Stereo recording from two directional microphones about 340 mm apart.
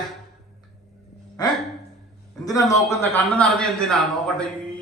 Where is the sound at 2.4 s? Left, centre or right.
Centre.